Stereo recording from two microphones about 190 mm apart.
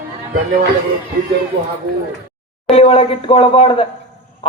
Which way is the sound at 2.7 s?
30° left (ahead or behind).